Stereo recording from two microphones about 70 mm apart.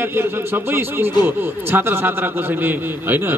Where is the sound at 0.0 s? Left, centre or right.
Right.